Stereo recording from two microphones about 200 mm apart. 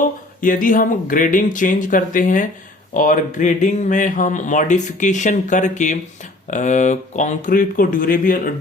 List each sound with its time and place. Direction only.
0.0 s speech: 45° left (ahead or behind)